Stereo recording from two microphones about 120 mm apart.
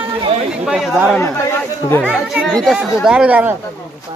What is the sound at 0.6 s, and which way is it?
Speech, 5° right (ahead or behind).